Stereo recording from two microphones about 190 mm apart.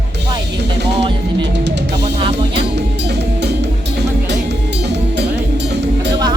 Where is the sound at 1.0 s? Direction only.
25° right (ahead or behind).